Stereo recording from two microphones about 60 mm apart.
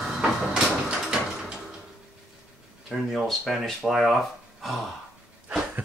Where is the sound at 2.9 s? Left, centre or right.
Centre.